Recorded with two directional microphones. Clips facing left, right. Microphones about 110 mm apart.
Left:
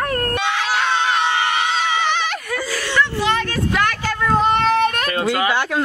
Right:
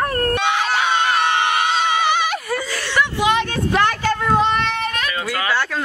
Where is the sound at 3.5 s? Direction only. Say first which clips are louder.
Right 2 dB; 30° right (ahead or behind).